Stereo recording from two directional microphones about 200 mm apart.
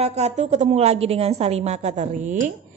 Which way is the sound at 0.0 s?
35° right (ahead or behind).